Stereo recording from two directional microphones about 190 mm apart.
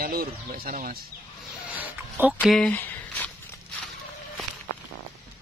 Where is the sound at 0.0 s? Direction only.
50° right (ahead or behind).